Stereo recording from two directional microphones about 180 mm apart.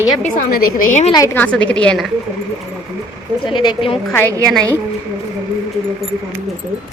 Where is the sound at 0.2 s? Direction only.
50° left (ahead or behind).